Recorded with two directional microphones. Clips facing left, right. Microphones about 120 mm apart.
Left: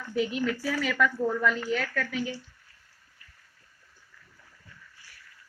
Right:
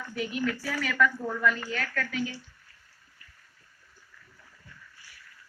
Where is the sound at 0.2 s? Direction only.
25° left (ahead or behind).